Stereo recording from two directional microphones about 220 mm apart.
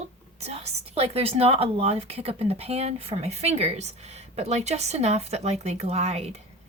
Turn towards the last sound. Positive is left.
turn(degrees=-30)  # may be behind; listen again after turning